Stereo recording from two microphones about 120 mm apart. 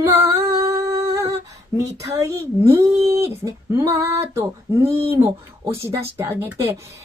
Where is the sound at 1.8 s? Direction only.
25° right (ahead or behind).